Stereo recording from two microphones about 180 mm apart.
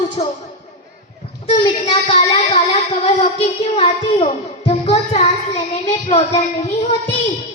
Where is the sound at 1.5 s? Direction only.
30° left (ahead or behind).